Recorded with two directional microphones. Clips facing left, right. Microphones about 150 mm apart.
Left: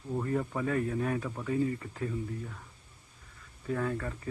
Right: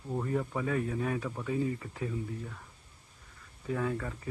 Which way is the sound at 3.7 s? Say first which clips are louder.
Even; 5° right (ahead or behind).